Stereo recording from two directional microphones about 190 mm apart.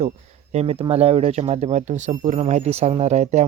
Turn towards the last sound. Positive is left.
turn(degrees=-35)  # may be behind; listen again after turning